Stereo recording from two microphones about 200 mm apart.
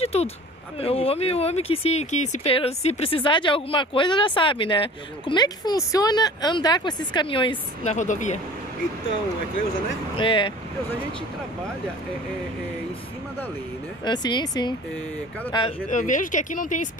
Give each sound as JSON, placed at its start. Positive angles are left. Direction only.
{"t": 0.0, "sound": "speech", "side_deg": 30}
{"t": 10.1, "sound": "speech", "side_deg": 25}
{"t": 14.0, "sound": "speech", "side_deg": 20}
{"t": 15.9, "sound": "speech", "side_deg": 40}